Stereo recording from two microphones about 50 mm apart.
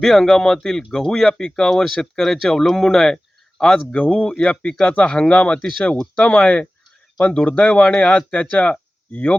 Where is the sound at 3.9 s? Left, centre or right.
Left.